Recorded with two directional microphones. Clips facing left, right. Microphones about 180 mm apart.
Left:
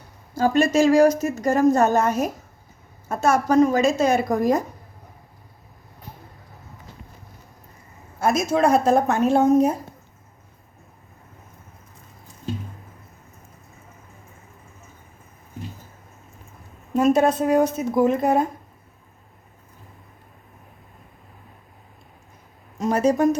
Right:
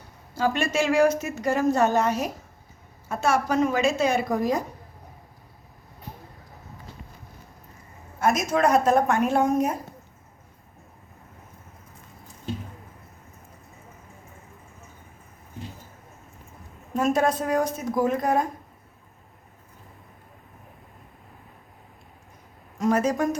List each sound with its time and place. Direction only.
0.3 s a woman's voice: 40° left (ahead or behind)
8.2 s a woman's voice: 30° left (ahead or behind)
17.0 s a woman's voice: 25° left (ahead or behind)
22.8 s a woman's voice: 30° left (ahead or behind)